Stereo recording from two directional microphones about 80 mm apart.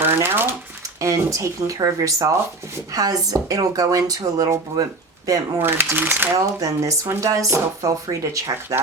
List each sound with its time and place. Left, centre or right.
0.0 s a sound: right
0.9 s speech: right
5.6 s speech: right
6.3 s speech: right